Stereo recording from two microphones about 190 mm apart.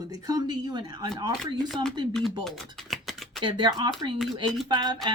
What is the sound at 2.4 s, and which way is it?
Typing, centre (ahead or behind).